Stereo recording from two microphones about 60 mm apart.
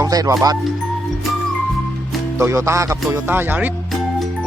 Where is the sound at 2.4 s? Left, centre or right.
Right.